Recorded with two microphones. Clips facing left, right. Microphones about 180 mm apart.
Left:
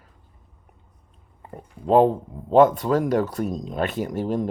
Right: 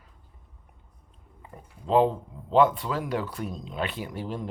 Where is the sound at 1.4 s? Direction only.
50° left (ahead or behind).